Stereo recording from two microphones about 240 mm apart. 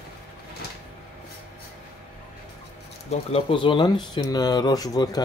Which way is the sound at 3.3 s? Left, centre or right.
Left.